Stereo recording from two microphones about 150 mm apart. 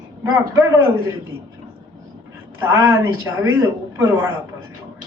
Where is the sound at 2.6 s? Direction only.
15° right (ahead or behind).